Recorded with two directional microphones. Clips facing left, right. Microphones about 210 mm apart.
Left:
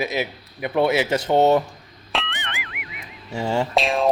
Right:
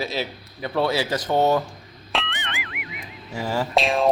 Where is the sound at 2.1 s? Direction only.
Centre (ahead or behind).